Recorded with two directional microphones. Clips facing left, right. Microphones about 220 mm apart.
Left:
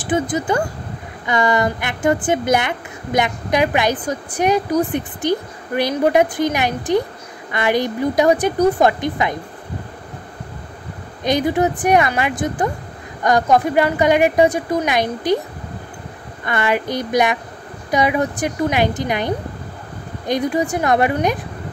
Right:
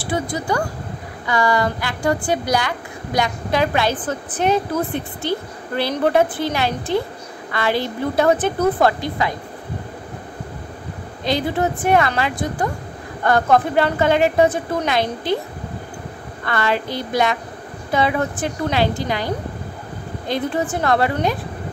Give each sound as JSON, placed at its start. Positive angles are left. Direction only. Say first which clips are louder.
{"t": 0.0, "sound": "a woman's voice", "louder": "left 4 dB", "side_deg": 20}
{"t": 11.2, "sound": "a woman's voice", "louder": "left 3 dB", "side_deg": 15}
{"t": 16.4, "sound": "a woman's voice", "louder": "left 2 dB", "side_deg": 15}